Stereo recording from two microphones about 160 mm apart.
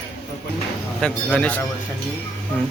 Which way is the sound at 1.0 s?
5° left (ahead or behind).